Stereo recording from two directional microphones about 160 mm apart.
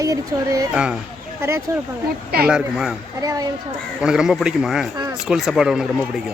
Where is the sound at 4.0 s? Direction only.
5° right (ahead or behind).